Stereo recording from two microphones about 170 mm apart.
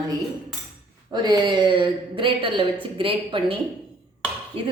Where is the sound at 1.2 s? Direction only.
25° right (ahead or behind).